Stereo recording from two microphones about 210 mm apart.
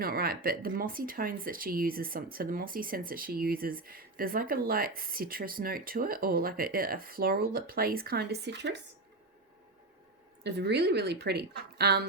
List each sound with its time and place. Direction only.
0.0 s speech: 45° right (ahead or behind)
10.4 s speech: 55° right (ahead or behind)